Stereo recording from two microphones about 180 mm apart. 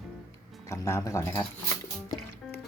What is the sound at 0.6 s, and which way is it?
Speech, 15° left (ahead or behind).